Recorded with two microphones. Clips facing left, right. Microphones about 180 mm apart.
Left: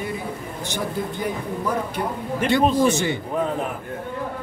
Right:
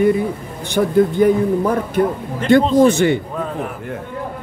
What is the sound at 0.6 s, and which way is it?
Speech, 55° right (ahead or behind).